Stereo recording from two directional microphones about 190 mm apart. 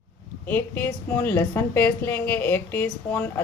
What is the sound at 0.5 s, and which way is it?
A woman's voice, 10° left (ahead or behind).